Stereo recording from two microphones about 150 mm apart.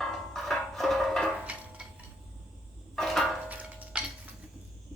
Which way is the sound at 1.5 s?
10° right (ahead or behind).